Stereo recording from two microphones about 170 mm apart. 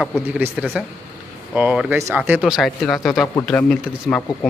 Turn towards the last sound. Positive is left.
turn(degrees=5)  # may be behind; listen again after turning